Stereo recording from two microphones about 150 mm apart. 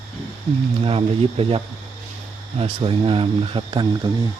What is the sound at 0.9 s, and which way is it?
Speech, 40° right (ahead or behind).